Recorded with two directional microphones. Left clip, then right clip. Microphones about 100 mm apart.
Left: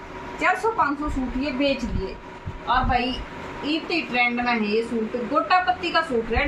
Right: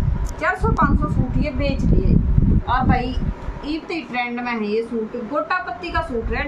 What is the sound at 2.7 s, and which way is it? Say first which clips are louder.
Speech: right 1 dB; 35° right (ahead or behind).